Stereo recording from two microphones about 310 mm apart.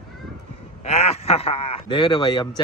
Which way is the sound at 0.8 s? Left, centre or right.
Centre.